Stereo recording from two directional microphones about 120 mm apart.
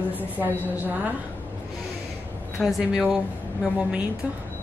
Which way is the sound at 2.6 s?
5° right (ahead or behind).